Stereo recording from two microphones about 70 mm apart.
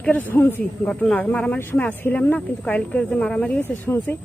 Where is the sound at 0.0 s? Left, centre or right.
Left.